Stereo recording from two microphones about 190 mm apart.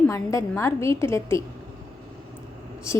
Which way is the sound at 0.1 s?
15° left (ahead or behind).